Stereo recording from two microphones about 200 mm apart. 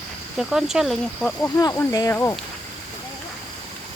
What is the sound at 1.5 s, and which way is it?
Speech, 15° left (ahead or behind).